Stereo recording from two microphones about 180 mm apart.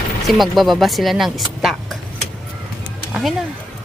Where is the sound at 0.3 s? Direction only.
Centre (ahead or behind).